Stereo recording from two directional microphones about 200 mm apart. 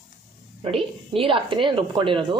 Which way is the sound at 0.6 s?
25° right (ahead or behind).